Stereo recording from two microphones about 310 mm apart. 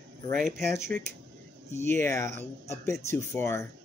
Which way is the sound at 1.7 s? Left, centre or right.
Centre.